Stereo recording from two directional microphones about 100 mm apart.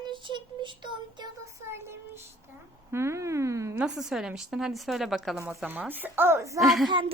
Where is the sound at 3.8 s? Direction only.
5° right (ahead or behind); by 6.6 s 30° right (ahead or behind).